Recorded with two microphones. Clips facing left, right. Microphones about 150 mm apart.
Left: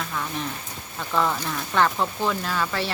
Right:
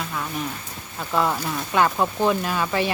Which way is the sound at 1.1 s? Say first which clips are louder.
Right 2 dB; 10° right (ahead or behind).